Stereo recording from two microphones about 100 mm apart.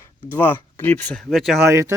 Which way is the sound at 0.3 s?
20° left (ahead or behind).